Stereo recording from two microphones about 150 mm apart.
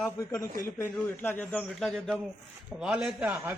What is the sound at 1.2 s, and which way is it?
Speech, 10° left (ahead or behind).